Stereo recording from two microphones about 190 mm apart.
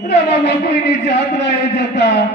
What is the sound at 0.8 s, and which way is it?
A man's voice, 65° left (ahead or behind).